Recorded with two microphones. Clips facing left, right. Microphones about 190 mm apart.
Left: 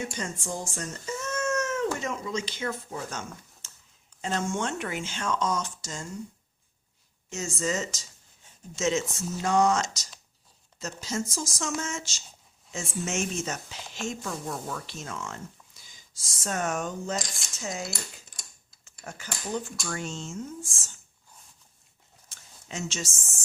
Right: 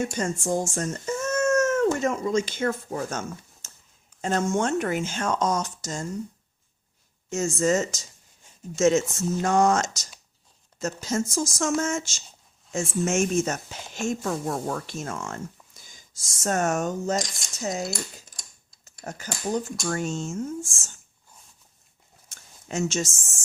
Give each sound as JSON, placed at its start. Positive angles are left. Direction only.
{"t": 0.0, "sound": "speech", "side_deg": -45}
{"t": 7.3, "sound": "speech", "side_deg": -45}
{"t": 19.0, "sound": "speech", "side_deg": -40}
{"t": 22.3, "sound": "a sound", "side_deg": -45}